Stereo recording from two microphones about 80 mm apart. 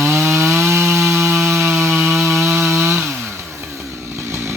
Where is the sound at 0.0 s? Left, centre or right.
Right.